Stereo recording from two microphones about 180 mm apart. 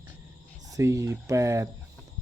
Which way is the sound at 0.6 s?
20° right (ahead or behind).